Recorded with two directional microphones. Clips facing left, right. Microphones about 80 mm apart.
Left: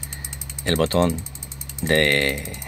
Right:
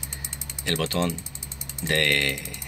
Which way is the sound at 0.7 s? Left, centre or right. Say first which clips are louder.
Left 7 dB; left.